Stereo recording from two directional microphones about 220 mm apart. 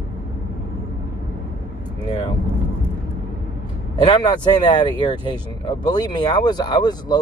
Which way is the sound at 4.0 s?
20° left (ahead or behind).